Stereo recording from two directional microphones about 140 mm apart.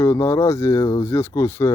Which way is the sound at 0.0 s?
20° left (ahead or behind).